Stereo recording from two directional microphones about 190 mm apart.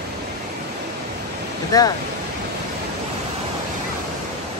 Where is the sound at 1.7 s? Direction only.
20° left (ahead or behind).